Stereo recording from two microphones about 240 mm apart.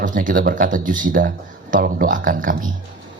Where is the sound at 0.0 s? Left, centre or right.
Right.